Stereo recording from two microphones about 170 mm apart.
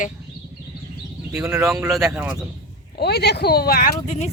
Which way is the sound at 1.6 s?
15° right (ahead or behind).